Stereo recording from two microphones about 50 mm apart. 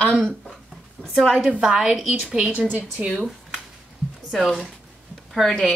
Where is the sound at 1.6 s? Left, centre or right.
Centre.